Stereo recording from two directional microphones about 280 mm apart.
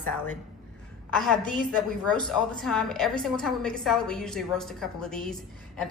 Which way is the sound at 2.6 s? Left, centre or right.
Centre.